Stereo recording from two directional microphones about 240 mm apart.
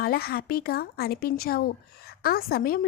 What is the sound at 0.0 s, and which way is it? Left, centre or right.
Speech, left.